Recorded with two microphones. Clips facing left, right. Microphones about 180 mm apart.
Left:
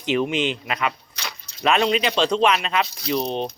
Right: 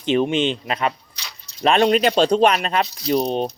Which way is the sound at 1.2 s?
50° left (ahead or behind).